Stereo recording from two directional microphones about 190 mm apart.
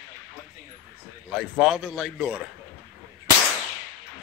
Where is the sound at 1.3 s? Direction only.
Centre (ahead or behind).